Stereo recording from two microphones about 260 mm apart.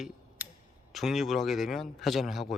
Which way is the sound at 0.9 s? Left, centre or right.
Centre.